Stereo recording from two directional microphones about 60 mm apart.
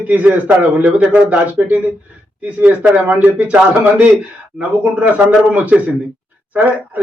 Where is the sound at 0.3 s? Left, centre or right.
Right.